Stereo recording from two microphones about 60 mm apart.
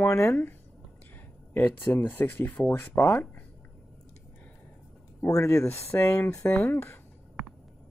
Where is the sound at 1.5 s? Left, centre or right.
Left.